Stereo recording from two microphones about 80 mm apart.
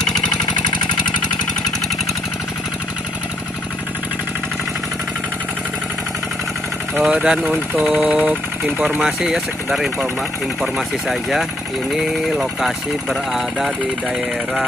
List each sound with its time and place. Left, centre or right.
7.0 s speech: centre
9.0 s speech: centre